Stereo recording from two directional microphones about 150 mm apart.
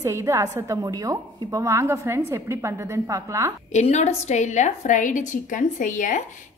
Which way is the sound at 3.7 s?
50° left (ahead or behind).